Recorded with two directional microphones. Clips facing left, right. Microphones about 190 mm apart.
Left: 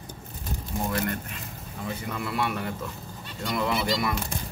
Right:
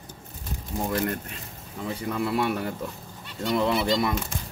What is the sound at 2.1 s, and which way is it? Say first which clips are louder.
Speech: right 4 dB; 35° right (ahead or behind).